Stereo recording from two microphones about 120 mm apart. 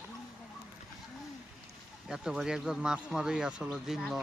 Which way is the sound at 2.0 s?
5° right (ahead or behind).